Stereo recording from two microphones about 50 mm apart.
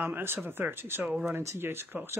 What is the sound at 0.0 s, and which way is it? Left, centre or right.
Speech, right.